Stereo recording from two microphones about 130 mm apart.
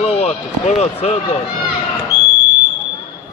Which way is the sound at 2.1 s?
65° right (ahead or behind).